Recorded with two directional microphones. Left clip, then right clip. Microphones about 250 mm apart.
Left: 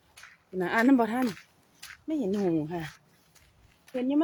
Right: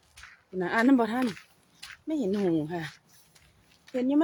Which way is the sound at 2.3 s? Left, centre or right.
Centre.